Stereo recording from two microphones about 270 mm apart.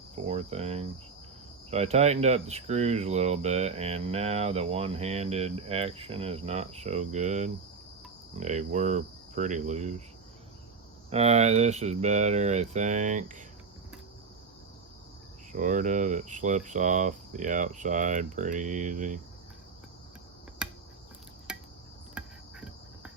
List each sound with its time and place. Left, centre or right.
0.3 s speech: right
11.1 s speech: right
15.5 s speech: right
20.6 s cricket: centre